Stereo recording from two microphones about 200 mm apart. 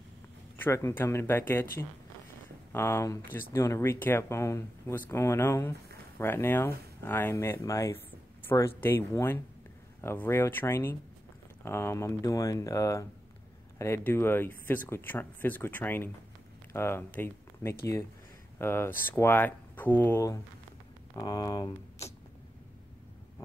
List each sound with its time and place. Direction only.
0.6 s speech: 15° left (ahead or behind)